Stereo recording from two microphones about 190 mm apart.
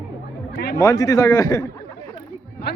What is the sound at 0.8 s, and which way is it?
Speech, 15° left (ahead or behind).